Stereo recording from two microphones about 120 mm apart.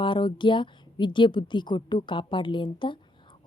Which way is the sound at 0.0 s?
45° left (ahead or behind).